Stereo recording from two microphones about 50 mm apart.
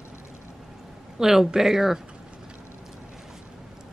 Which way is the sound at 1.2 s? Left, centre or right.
Centre.